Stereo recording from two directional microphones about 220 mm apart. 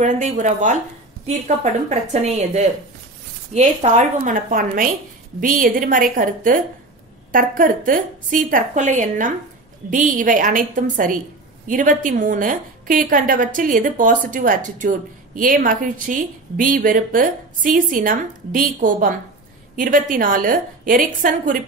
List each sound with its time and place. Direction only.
0.0 s a woman's voice: 35° right (ahead or behind)
3.5 s a woman's voice: 30° right (ahead or behind)